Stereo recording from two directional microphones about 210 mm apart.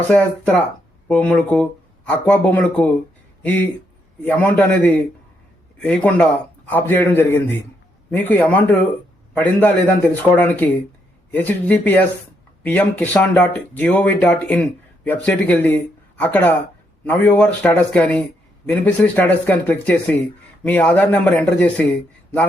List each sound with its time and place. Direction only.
0.1 s speech: 5° left (ahead or behind)
4.2 s speech: 10° left (ahead or behind)